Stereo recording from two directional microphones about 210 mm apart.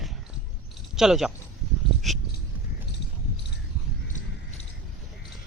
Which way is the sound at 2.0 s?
Centre (ahead or behind).